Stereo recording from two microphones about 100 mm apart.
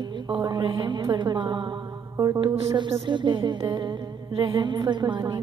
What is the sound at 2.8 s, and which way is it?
A woman's voice, 60° right (ahead or behind).